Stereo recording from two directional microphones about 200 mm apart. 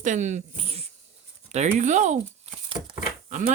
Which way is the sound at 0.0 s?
35° right (ahead or behind).